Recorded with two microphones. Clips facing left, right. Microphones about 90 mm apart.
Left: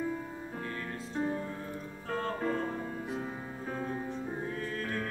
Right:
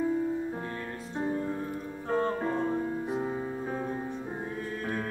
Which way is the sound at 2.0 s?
20° right (ahead or behind).